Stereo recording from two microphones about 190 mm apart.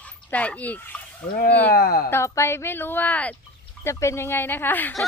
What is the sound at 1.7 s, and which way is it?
Speech, 50° left (ahead or behind).